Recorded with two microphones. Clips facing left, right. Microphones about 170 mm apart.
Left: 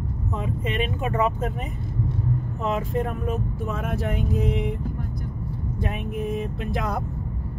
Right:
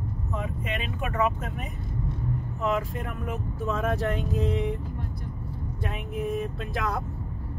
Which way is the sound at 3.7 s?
Centre (ahead or behind).